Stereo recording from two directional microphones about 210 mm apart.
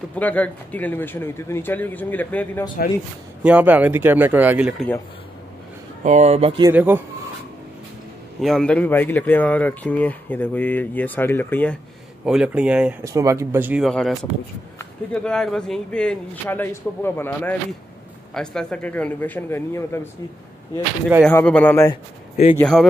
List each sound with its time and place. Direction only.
0.1 s speech: 5° left (ahead or behind)
3.4 s speech: 5° right (ahead or behind)
6.0 s speech: 30° right (ahead or behind)
6.6 s speech: 10° right (ahead or behind)
8.4 s speech: centre (ahead or behind)
12.3 s a man's voice: 5° right (ahead or behind)
15.1 s a man's voice: 5° left (ahead or behind)
21.3 s a man's voice: 10° left (ahead or behind)